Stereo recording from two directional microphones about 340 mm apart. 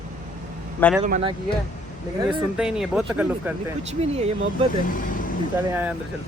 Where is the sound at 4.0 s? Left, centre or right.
Centre.